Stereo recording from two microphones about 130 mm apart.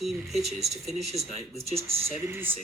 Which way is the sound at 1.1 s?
55° right (ahead or behind).